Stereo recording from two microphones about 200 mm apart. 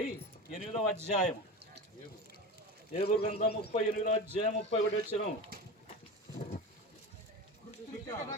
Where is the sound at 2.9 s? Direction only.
30° left (ahead or behind).